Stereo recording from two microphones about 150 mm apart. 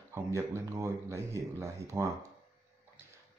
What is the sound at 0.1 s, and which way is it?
Speech, 20° right (ahead or behind).